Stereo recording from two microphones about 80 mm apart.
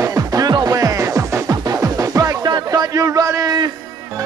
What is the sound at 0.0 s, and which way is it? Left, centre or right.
Music, right.